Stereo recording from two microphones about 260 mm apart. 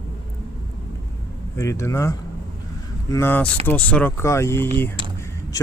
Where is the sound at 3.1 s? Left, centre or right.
Centre.